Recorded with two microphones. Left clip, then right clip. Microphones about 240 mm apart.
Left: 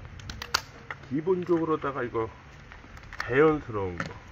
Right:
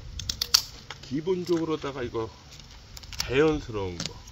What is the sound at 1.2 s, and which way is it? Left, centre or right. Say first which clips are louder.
Speech: left 1 dB; centre.